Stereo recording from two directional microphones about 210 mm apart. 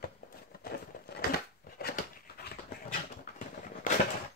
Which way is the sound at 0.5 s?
45° left (ahead or behind).